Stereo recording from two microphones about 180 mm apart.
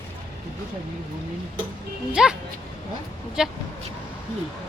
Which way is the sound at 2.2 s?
5° right (ahead or behind).